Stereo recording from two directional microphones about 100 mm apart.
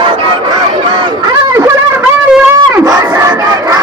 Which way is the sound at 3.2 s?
35° right (ahead or behind).